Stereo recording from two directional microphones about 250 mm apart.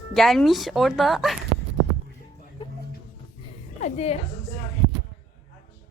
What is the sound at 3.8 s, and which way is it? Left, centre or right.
Speech, left.